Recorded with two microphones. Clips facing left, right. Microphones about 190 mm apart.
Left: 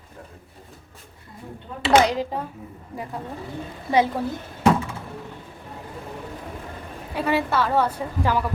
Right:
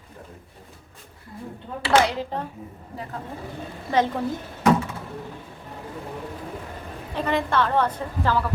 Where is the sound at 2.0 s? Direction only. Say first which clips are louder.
Left 2 dB; 15° left (ahead or behind).